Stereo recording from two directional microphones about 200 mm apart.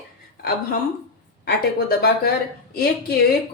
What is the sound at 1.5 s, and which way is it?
Speech, 55° left (ahead or behind).